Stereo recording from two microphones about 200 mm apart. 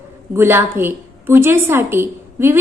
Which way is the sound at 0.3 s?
10° right (ahead or behind).